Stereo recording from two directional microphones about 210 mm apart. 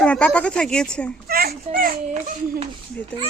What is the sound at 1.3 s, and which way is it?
A child's voice, 45° right (ahead or behind).